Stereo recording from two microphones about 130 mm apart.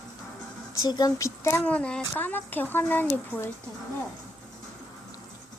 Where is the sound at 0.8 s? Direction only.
30° left (ahead or behind).